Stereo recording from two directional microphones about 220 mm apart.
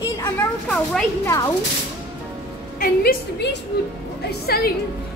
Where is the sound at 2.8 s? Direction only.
45° left (ahead or behind).